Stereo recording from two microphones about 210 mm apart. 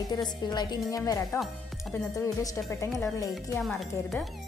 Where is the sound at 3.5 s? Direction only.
Centre (ahead or behind).